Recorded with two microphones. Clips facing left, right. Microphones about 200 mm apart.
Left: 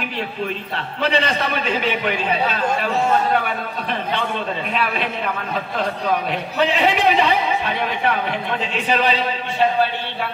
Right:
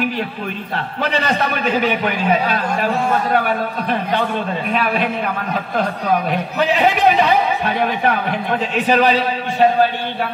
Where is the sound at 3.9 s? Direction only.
45° right (ahead or behind).